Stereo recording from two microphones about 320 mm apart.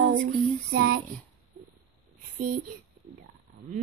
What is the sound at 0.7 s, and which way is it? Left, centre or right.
Speech, right.